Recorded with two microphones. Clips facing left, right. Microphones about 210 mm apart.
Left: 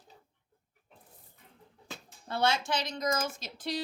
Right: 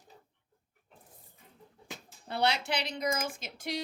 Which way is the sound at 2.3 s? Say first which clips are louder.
Left 1 dB; 20° right (ahead or behind).